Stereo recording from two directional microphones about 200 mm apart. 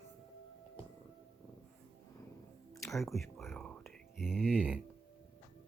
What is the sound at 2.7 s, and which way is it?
Music, 15° left (ahead or behind).